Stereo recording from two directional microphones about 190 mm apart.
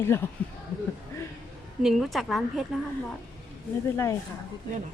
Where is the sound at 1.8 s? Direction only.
Centre (ahead or behind).